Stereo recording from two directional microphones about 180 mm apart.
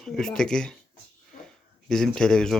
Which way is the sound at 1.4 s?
5° left (ahead or behind).